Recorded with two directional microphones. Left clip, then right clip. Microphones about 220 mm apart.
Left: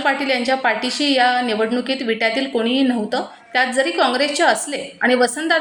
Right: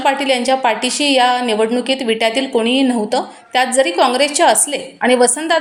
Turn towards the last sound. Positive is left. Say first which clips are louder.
# right 3 dB
turn(degrees=-25)  # may be behind; listen again after turning